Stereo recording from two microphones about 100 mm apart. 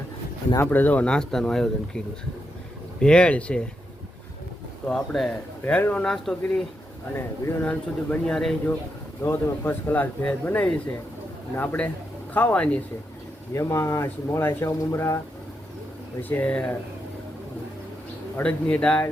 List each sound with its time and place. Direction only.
0.6 s speech: 20° left (ahead or behind)
3.0 s speech: 10° left (ahead or behind)
4.9 s speech: 5° left (ahead or behind)
5.6 s speech: 15° left (ahead or behind)
6.1 s speech: centre (ahead or behind)
7.2 s speech: 25° left (ahead or behind)
7.7 s speech: 10° left (ahead or behind)
9.2 s speech: 20° left (ahead or behind)
13.5 s speech: 30° left (ahead or behind)
16.3 s speech: 15° left (ahead or behind)
18.3 s speech: 15° left (ahead or behind)